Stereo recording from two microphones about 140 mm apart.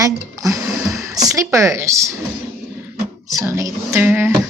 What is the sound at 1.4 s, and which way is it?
Speech, 20° right (ahead or behind).